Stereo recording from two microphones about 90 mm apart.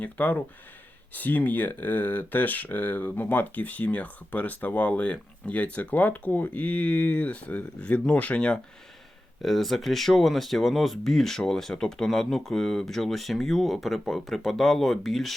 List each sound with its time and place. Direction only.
0.0 s speech: 20° left (ahead or behind)
9.4 s speech: centre (ahead or behind)